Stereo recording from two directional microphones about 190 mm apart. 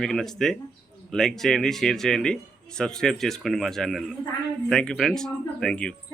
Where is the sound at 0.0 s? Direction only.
Centre (ahead or behind).